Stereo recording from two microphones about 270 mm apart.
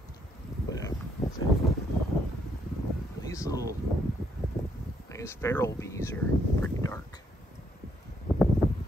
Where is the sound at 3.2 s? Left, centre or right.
Centre.